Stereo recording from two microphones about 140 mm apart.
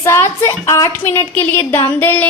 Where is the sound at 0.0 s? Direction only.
20° left (ahead or behind).